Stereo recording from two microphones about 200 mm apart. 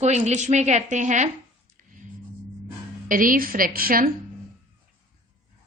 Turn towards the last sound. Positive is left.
turn(degrees=-45)  # may be behind; listen again after turning